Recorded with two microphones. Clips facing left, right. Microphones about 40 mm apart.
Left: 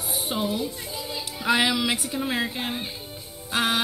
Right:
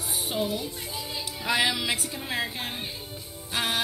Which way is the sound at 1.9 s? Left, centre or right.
Left.